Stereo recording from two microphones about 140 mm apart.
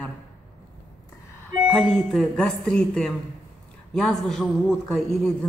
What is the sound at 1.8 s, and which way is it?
A woman's voice, centre (ahead or behind).